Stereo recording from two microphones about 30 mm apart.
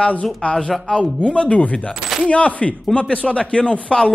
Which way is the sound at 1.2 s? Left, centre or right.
Left.